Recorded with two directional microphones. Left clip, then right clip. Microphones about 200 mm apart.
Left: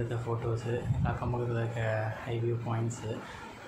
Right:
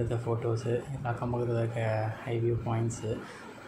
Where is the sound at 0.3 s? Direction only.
5° right (ahead or behind).